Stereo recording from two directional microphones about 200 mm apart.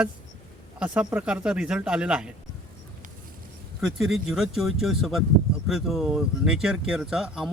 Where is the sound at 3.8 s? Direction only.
Centre (ahead or behind).